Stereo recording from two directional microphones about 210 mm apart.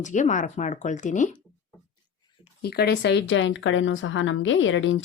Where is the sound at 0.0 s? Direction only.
35° left (ahead or behind).